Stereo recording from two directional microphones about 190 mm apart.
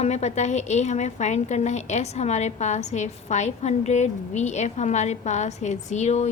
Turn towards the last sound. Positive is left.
turn(degrees=35)  # may be behind; listen again after turning